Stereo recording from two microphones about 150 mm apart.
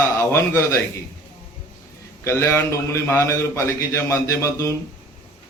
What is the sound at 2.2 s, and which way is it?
A man's voice, 20° left (ahead or behind).